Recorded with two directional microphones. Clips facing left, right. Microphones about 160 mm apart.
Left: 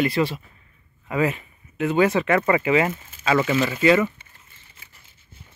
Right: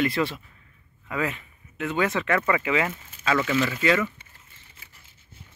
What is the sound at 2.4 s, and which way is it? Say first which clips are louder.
Speech: left 5 dB; 35° left (ahead or behind).